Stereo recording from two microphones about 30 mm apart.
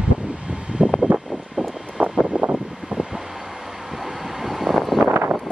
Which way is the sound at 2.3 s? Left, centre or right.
Right.